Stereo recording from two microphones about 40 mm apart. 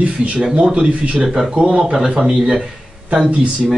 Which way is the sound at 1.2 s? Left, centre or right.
Centre.